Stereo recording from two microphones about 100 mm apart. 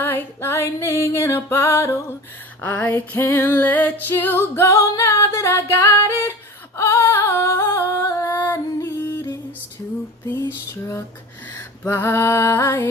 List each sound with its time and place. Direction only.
0.0 s music: 20° left (ahead or behind)
8.8 s music: 40° left (ahead or behind)
11.9 s music: 25° left (ahead or behind)